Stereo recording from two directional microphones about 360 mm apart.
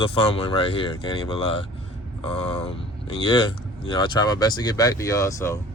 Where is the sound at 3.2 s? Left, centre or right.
Centre.